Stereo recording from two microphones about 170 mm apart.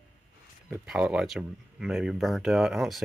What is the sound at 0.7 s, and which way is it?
Speech, 5° right (ahead or behind).